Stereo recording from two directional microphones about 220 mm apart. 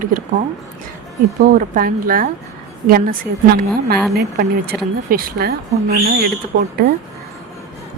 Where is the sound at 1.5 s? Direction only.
40° right (ahead or behind).